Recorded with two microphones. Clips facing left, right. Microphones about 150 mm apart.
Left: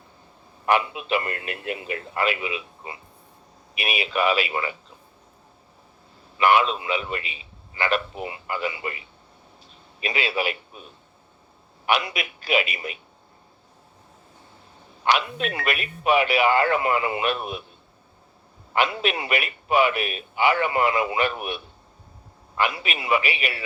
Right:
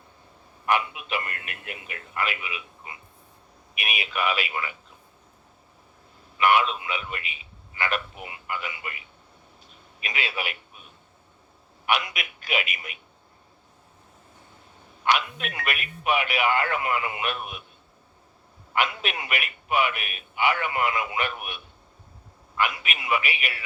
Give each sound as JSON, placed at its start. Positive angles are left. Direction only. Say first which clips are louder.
{"t": 0.6, "sound": "a man's voice", "louder": "left 3 dB", "side_deg": 30}
{"t": 6.3, "sound": "a man's voice", "louder": "left 2 dB", "side_deg": 30}
{"t": 11.9, "sound": "a man's voice", "louder": "left 3 dB", "side_deg": 35}
{"t": 15.0, "sound": "a man's voice", "louder": "left 2 dB", "side_deg": 30}
{"t": 18.7, "sound": "a man's voice", "louder": "left 4 dB", "side_deg": 30}